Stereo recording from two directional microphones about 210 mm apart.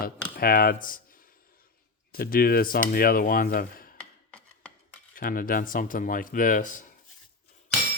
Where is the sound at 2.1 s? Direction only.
45° left (ahead or behind).